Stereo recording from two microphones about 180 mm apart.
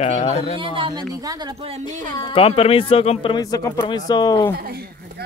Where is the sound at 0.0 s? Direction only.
40° left (ahead or behind).